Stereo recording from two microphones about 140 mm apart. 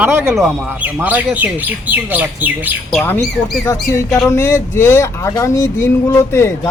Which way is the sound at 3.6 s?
20° left (ahead or behind).